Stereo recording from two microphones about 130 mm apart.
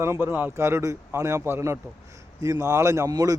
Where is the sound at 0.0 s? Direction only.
20° right (ahead or behind).